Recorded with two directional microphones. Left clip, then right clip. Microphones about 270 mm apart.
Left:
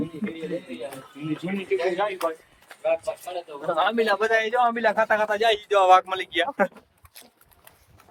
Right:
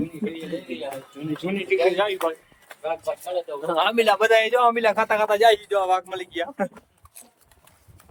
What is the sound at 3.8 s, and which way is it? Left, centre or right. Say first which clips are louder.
Speech: right 3 dB; centre.